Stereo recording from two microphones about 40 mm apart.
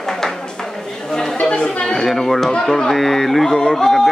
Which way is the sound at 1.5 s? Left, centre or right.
Left.